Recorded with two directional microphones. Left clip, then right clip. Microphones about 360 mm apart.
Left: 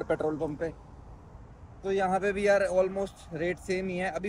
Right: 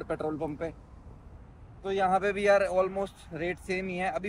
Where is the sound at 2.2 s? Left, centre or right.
Left.